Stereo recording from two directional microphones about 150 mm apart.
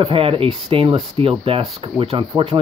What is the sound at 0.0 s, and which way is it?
Speech, 35° right (ahead or behind).